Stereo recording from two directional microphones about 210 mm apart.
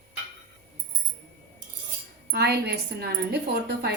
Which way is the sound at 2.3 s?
50° right (ahead or behind).